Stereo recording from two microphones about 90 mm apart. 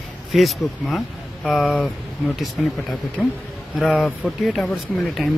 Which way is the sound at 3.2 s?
5° right (ahead or behind).